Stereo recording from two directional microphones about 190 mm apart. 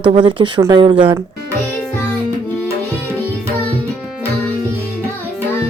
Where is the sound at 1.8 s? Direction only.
10° left (ahead or behind).